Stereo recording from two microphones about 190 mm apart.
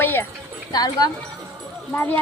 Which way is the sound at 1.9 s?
10° left (ahead or behind).